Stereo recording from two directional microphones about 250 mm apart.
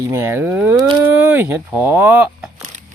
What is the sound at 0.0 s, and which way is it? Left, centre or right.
Speech, centre.